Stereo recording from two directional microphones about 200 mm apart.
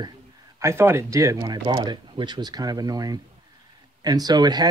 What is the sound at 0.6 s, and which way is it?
Speech, 15° right (ahead or behind).